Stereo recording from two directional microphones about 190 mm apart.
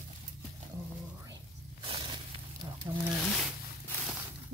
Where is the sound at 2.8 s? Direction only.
20° right (ahead or behind).